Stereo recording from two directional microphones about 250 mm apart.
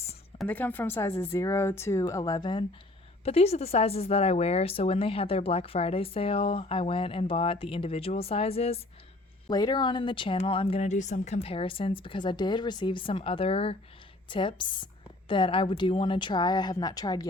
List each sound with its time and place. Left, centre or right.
0.3 s speech: centre